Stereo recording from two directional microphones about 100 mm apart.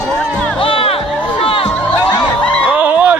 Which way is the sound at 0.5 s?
65° left (ahead or behind).